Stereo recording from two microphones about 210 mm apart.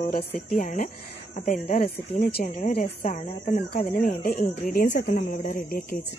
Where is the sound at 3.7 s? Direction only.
45° left (ahead or behind).